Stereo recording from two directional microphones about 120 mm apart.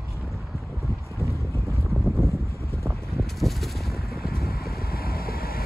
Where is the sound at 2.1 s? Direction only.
25° right (ahead or behind).